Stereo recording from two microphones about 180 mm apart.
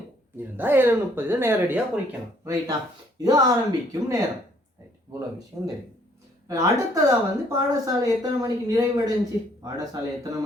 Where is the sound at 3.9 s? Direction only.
15° right (ahead or behind).